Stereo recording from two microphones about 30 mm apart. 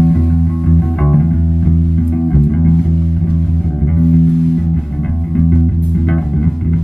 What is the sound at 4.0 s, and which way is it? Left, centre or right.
Music, centre.